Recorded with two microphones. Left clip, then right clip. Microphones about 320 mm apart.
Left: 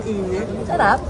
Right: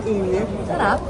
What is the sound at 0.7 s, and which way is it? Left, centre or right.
Speech, centre.